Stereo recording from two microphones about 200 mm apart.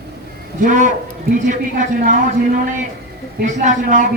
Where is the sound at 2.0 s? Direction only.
40° right (ahead or behind).